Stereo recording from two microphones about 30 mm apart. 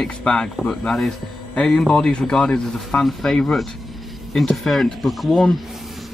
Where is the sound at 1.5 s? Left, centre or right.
Left.